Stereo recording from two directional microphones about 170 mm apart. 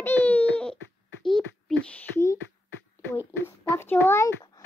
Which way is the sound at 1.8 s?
10° left (ahead or behind).